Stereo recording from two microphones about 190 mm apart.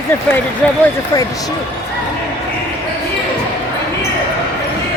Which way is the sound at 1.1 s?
20° left (ahead or behind).